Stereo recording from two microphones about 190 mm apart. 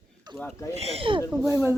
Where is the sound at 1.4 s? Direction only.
15° right (ahead or behind).